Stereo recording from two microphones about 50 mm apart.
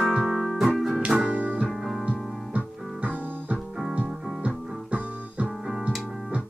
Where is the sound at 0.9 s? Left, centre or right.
Right.